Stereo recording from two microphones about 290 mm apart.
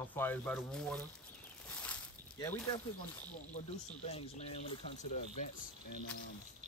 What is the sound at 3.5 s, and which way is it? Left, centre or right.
Speech, left.